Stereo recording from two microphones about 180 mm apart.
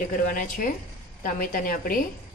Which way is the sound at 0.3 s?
50° left (ahead or behind).